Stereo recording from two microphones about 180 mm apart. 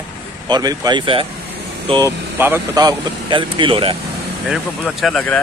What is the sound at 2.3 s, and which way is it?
Speech, 10° right (ahead or behind).